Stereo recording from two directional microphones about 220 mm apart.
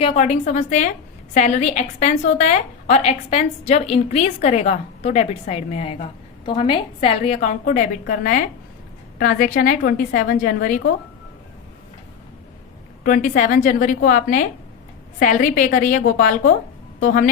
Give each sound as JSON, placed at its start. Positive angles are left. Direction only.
{"t": 0.0, "sound": "a woman's voice", "side_deg": 30}
{"t": 7.6, "sound": "a woman's voice", "side_deg": 40}
{"t": 13.1, "sound": "a woman's voice", "side_deg": 35}